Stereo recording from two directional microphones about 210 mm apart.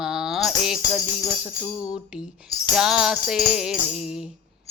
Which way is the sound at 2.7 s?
5° right (ahead or behind).